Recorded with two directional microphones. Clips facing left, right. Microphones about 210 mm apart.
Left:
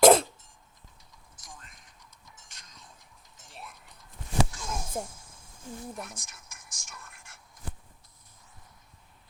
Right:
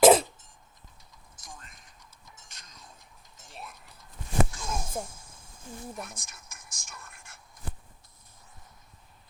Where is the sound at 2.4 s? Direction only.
40° right (ahead or behind).